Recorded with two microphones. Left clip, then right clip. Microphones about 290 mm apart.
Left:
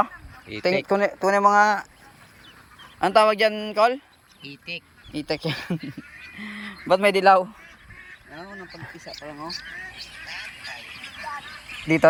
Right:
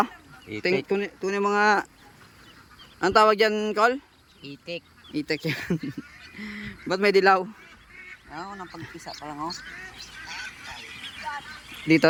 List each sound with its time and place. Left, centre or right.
0.4 s speech: centre
3.0 s speech: centre
9.0 s speech: right
9.6 s speech: centre